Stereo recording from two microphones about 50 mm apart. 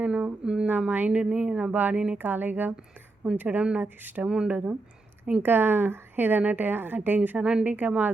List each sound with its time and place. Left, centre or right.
0.0 s speech: right
0.9 s a woman's voice: right
1.1 s speech: centre
1.7 s a woman's voice: right
4.3 s speech: centre
4.5 s a woman's voice: right
5.4 s a woman's voice: right
7.3 s a woman's voice: right